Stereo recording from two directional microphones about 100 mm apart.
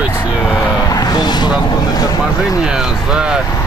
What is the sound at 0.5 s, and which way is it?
Speech, 25° left (ahead or behind).